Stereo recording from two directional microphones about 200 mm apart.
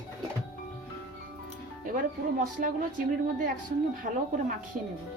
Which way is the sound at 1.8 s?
40° right (ahead or behind).